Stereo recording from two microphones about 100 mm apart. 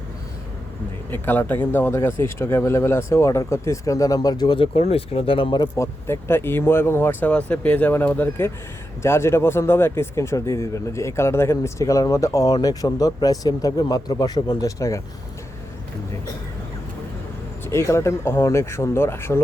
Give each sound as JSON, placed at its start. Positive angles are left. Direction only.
{"t": 1.1, "sound": "speech", "side_deg": 20}
{"t": 4.5, "sound": "speech", "side_deg": 75}
{"t": 5.7, "sound": "speech", "side_deg": 30}
{"t": 17.7, "sound": "speech", "side_deg": 25}